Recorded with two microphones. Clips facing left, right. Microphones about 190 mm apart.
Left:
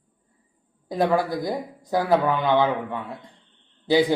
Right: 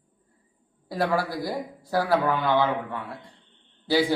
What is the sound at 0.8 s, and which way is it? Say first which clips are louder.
A man's voice: left 4 dB; 20° left (ahead or behind).